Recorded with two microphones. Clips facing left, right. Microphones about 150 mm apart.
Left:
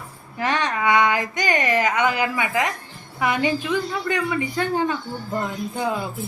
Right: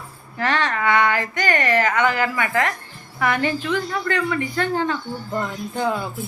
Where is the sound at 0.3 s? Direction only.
15° left (ahead or behind).